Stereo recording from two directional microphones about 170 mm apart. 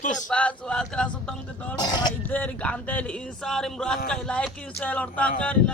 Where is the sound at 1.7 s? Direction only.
25° left (ahead or behind).